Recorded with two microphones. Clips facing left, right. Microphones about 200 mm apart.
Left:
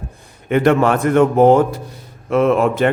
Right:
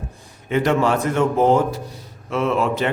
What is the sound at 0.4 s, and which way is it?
A man's voice, 55° left (ahead or behind).